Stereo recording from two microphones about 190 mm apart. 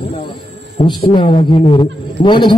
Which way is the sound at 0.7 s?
25° left (ahead or behind).